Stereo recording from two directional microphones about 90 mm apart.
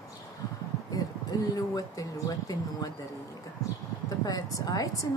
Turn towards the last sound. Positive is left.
turn(degrees=40)  # may be behind; listen again after turning